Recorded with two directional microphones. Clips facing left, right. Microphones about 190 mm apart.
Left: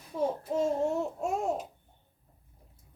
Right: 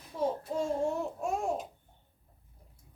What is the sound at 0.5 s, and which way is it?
Babbling, 25° left (ahead or behind).